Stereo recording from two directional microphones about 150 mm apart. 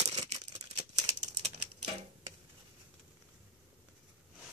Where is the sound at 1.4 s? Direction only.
35° right (ahead or behind).